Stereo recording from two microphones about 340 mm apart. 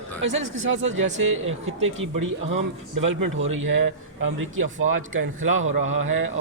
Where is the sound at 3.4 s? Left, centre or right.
Right.